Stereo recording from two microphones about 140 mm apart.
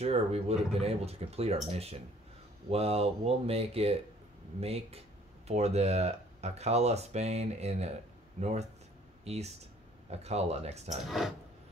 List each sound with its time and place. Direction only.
0.0 s speech: 45° right (ahead or behind)
11.1 s speech: centre (ahead or behind)